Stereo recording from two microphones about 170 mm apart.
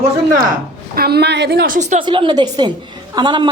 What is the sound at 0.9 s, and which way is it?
A woman's voice, 70° right (ahead or behind).